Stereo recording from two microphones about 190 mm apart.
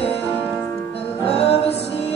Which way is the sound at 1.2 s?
30° left (ahead or behind).